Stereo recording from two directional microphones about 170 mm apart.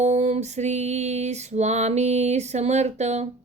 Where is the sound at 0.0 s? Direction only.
40° right (ahead or behind).